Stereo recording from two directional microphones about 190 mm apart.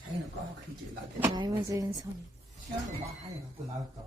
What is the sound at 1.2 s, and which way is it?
Speech, 20° right (ahead or behind).